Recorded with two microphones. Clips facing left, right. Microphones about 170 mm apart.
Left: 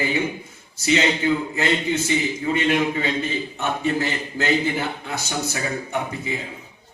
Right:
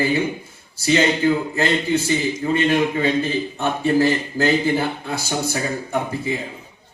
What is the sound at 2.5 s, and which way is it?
A man's voice, 30° right (ahead or behind).